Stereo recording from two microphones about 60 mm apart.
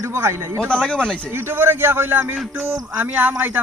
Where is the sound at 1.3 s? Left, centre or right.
Right.